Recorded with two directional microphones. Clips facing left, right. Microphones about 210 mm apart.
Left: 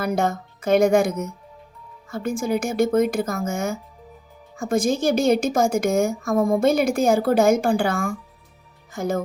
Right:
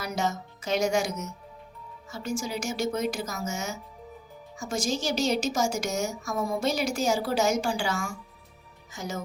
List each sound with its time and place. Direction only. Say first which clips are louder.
0.0 s a woman's voice: left 7 dB; 55° left (ahead or behind)